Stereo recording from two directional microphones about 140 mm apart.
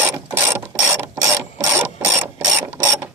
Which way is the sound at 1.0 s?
15° right (ahead or behind).